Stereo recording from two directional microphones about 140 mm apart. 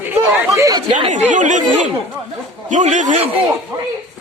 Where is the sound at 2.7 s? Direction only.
60° right (ahead or behind).